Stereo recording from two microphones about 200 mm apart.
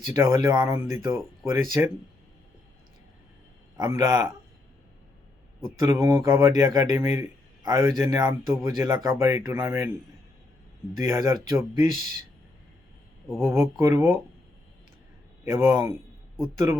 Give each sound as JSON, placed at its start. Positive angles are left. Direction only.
{"t": 0.1, "sound": "speech", "side_deg": -15}
{"t": 3.8, "sound": "speech", "side_deg": -15}
{"t": 5.8, "sound": "speech", "side_deg": -15}
{"t": 10.9, "sound": "speech", "side_deg": -15}
{"t": 13.4, "sound": "speech", "side_deg": -15}
{"t": 15.4, "sound": "speech", "side_deg": -15}